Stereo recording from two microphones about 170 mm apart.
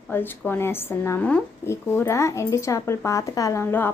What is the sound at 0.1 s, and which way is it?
Speech, 10° left (ahead or behind).